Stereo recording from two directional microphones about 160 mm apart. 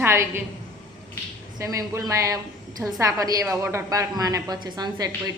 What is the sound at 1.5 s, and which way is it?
A woman's voice, 20° right (ahead or behind).